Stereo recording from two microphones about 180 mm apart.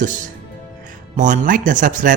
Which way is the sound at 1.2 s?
45° right (ahead or behind).